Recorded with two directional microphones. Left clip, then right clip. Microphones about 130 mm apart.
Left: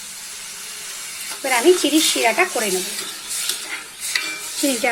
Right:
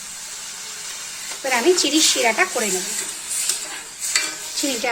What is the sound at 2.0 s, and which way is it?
Speech, 25° left (ahead or behind).